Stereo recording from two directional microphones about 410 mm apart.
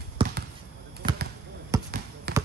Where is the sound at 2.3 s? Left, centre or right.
Right.